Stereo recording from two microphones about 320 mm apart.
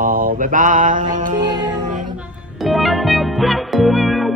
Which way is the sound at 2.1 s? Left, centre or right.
Centre.